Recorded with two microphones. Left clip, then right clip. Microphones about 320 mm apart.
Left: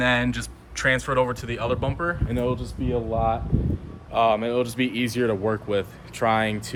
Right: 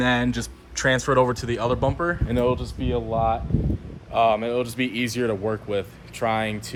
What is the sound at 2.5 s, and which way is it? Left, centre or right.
Speech, centre.